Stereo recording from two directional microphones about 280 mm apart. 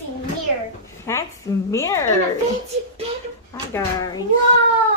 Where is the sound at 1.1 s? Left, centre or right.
Centre.